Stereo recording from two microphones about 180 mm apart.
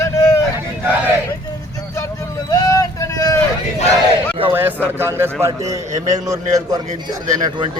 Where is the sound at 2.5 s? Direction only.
20° left (ahead or behind).